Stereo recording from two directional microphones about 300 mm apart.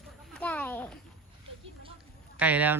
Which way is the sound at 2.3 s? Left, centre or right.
Centre.